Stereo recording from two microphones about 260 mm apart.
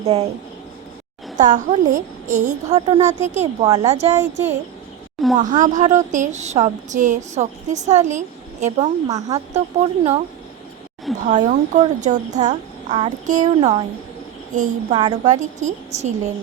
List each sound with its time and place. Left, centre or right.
0.0 s speech: right
1.4 s a woman's voice: right
3.2 s speech: right
4.1 s a woman's voice: centre
5.4 s speech: right
8.6 s speech: centre
11.3 s speech: right